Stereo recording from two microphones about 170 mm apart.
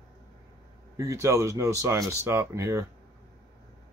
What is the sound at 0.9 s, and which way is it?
Speech, 20° right (ahead or behind).